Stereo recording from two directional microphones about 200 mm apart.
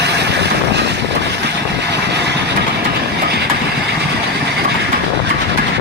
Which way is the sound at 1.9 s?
55° right (ahead or behind).